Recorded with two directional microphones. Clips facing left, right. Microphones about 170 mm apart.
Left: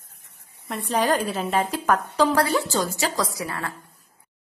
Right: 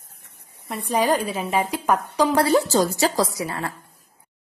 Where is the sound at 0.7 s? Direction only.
10° right (ahead or behind).